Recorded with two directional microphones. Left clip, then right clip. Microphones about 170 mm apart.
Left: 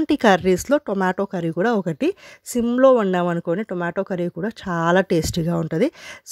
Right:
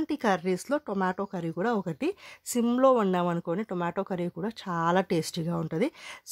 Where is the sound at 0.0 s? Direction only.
35° left (ahead or behind).